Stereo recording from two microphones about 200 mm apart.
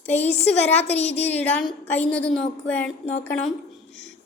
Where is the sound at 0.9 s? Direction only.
30° left (ahead or behind).